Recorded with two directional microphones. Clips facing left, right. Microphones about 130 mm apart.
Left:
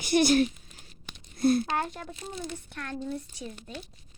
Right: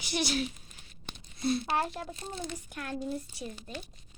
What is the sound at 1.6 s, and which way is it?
Speech, 5° right (ahead or behind).